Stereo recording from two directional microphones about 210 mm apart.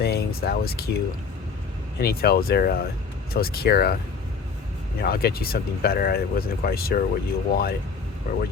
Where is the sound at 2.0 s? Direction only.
45° left (ahead or behind).